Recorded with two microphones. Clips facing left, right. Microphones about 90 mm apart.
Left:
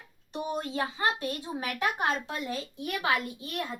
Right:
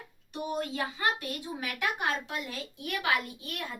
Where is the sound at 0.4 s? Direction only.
30° left (ahead or behind).